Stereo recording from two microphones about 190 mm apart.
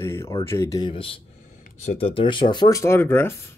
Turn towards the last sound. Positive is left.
turn(degrees=10)  # may be behind; listen again after turning